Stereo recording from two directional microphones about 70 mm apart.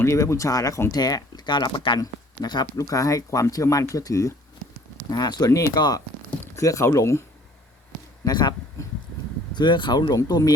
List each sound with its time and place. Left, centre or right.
0.0 s speech: left
0.9 s speech: left
2.7 s speech: left
5.1 s speech: left
5.5 s speech: left
5.7 s speech: left
6.6 s speech: left
8.2 s speech: left
9.6 s speech: left
10.2 s speech: left